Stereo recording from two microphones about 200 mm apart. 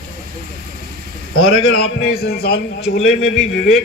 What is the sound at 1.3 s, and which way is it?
Speech, 90° left.